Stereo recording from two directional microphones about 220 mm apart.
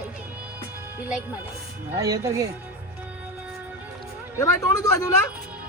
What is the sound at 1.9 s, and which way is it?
Speech, 15° right (ahead or behind).